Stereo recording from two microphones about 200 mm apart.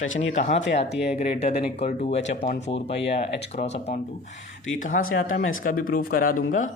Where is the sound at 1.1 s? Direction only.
35° left (ahead or behind).